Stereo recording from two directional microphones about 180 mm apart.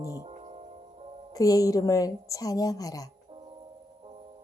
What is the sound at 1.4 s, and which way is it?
Speech, 20° left (ahead or behind).